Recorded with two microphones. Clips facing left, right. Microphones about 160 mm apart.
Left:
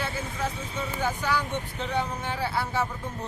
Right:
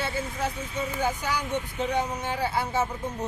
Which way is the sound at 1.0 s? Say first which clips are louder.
Left 2 dB; 15° right (ahead or behind).